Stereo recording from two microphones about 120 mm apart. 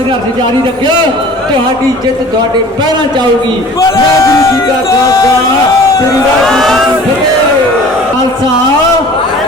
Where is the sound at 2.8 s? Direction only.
40° right (ahead or behind).